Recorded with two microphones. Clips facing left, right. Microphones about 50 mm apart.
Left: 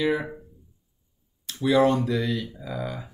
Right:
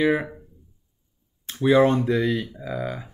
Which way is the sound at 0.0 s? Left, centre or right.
Right.